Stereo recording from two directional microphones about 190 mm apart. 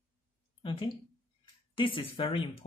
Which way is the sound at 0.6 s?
25° left (ahead or behind).